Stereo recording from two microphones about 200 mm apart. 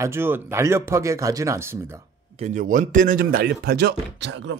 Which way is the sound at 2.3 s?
35° right (ahead or behind).